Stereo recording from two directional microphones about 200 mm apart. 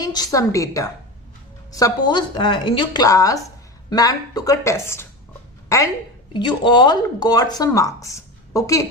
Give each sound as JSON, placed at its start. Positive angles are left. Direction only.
{"t": 0.0, "sound": "a woman's voice", "side_deg": 20}